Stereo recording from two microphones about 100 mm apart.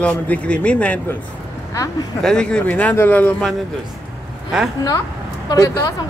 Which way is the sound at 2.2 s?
5° left (ahead or behind).